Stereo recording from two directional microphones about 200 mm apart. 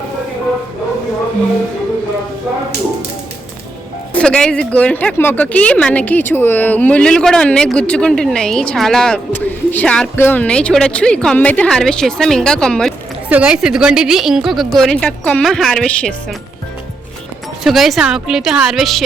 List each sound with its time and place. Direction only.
4.1 s speech: 5° left (ahead or behind)
17.6 s speech: centre (ahead or behind)